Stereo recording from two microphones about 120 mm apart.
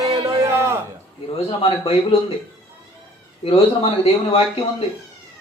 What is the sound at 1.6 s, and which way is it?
Speech, 55° left (ahead or behind).